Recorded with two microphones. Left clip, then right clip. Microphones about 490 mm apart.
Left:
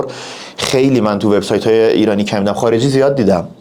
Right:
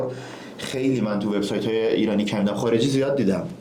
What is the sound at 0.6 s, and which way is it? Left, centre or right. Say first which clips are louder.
Speech: left 12 dB; left.